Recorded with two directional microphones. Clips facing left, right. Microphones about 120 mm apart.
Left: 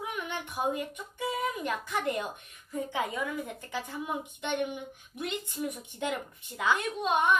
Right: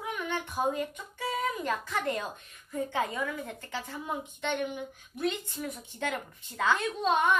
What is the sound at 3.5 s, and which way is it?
A woman's voice, 15° left (ahead or behind).